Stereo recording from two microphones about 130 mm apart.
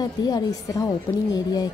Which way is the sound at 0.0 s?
30° left (ahead or behind).